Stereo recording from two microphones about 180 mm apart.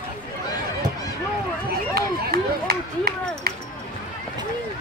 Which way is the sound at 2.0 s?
60° right (ahead or behind).